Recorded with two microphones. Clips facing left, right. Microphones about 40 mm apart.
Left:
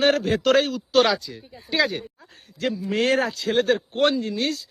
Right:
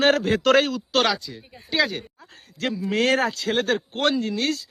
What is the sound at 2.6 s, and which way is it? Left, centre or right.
A man's voice, right.